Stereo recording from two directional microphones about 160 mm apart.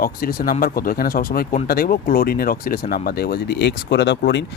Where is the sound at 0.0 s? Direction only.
65° left (ahead or behind).